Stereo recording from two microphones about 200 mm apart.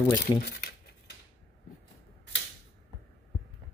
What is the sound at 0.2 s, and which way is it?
Speech, 50° left (ahead or behind).